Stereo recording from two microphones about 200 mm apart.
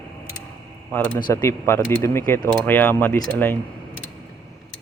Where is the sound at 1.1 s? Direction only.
15° left (ahead or behind).